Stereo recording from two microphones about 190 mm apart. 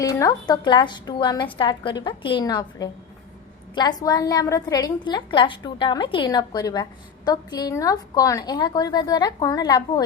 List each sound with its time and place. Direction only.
0.0 s a woman's voice: 15° left (ahead or behind)